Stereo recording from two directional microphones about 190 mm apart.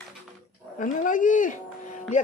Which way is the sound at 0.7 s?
45° left (ahead or behind).